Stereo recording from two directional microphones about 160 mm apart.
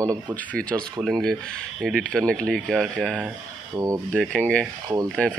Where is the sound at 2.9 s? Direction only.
10° right (ahead or behind).